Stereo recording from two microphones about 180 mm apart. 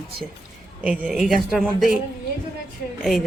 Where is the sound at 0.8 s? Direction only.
5° right (ahead or behind).